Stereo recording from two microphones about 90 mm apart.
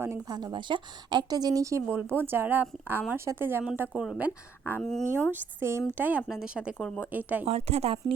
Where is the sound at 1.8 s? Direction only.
25° right (ahead or behind).